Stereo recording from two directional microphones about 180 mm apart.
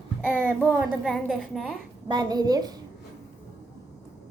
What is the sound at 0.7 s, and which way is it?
A woman's voice, 5° right (ahead or behind).